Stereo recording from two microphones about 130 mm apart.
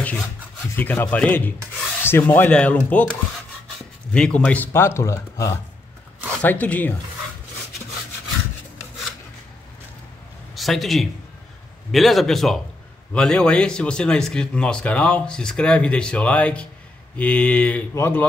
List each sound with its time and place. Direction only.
0.0 s rub: 5° left (ahead or behind)
0.7 s speech: 15° left (ahead or behind)
6.4 s speech: 10° left (ahead or behind)
10.5 s a man's voice: centre (ahead or behind); by 18.2 s 20° left (ahead or behind)